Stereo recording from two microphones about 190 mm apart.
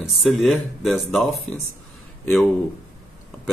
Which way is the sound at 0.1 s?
Centre (ahead or behind).